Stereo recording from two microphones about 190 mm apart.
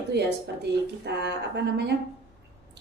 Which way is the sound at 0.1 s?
60° right (ahead or behind).